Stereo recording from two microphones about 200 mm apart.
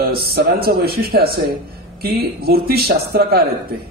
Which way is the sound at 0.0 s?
50° right (ahead or behind).